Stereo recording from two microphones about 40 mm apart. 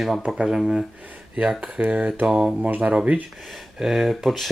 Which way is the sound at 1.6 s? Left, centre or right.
Right.